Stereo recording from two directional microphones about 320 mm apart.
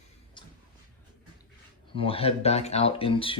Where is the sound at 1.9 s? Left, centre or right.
Centre.